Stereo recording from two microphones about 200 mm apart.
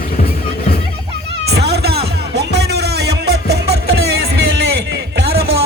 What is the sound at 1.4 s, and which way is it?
Cat, 55° right (ahead or behind).